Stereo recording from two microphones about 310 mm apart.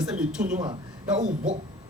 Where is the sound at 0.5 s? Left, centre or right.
Centre.